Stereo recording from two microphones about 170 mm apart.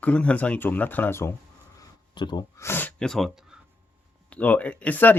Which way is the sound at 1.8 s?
25° left (ahead or behind).